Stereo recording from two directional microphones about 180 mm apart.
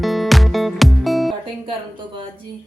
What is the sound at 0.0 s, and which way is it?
Music, centre (ahead or behind).